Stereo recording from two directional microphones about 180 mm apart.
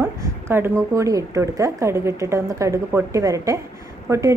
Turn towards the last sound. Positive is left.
turn(degrees=-15)  # may be behind; listen again after turning